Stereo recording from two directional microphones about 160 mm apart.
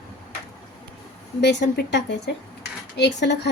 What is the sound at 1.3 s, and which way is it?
Speech, 90° left.